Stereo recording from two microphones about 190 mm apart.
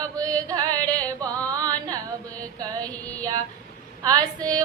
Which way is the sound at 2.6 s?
20° right (ahead or behind).